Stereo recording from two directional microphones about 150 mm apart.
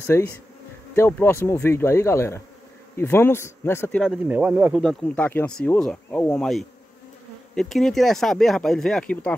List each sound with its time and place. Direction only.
0.0 s speech: 15° left (ahead or behind)
4.0 s speech: 5° right (ahead or behind)
4.8 s speech: 10° left (ahead or behind)